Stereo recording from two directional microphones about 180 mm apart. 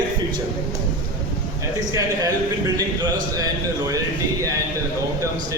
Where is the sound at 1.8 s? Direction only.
20° right (ahead or behind).